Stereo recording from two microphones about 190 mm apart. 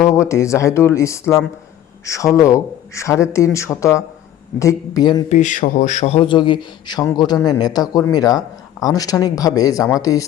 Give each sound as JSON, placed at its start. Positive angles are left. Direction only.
{"t": 0.1, "sound": "a man's voice", "side_deg": 15}
{"t": 5.3, "sound": "a man's voice", "side_deg": 40}